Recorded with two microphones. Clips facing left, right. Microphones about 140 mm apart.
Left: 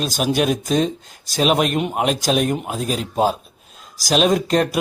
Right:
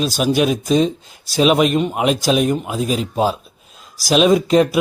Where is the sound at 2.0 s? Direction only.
45° left (ahead or behind).